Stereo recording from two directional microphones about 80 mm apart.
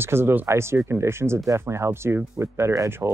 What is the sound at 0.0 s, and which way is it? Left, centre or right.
Speech, right.